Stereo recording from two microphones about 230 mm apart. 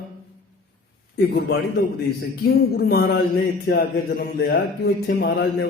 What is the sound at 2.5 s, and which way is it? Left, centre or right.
Speech, left.